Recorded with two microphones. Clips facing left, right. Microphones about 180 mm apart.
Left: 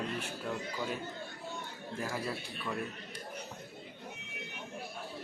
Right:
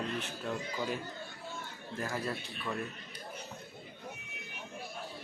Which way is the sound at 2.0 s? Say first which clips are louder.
Right 1 dB; 5° left (ahead or behind).